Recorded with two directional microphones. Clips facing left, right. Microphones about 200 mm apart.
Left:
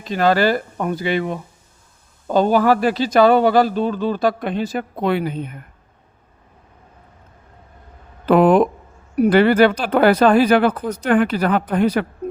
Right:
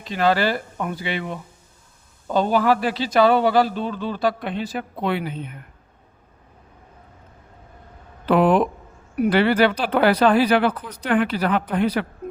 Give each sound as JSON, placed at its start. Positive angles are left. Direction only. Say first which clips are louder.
{"t": 0.0, "sound": "a man's voice", "louder": "left 4 dB", "side_deg": 45}
{"t": 8.3, "sound": "a man's voice", "louder": "left 4 dB", "side_deg": 45}
{"t": 12.2, "sound": "a sound", "louder": "left 5 dB", "side_deg": 35}